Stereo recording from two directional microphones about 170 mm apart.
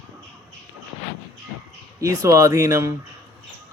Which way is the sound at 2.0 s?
20° right (ahead or behind).